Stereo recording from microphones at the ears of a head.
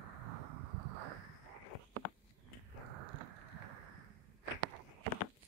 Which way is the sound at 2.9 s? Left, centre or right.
Right.